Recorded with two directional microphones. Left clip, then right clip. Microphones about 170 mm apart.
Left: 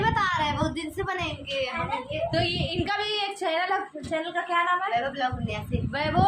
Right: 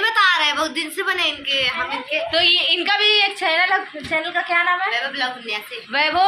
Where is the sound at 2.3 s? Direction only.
Centre (ahead or behind).